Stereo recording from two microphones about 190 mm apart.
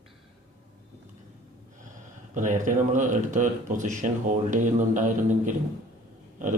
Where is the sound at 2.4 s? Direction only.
40° right (ahead or behind).